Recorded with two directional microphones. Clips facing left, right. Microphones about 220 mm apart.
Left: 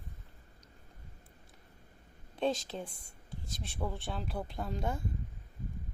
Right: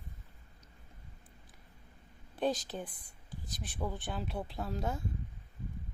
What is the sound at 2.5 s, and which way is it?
A woman's voice, 25° left (ahead or behind).